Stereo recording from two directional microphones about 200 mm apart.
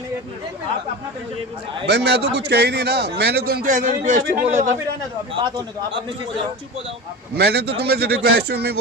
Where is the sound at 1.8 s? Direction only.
60° right (ahead or behind); by 4.7 s 35° right (ahead or behind).